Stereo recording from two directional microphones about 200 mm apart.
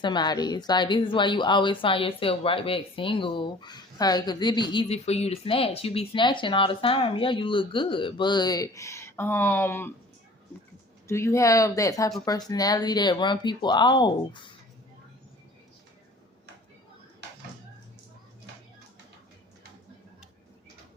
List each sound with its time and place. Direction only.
0.0 s speech: 20° left (ahead or behind)
11.1 s speech: 15° left (ahead or behind)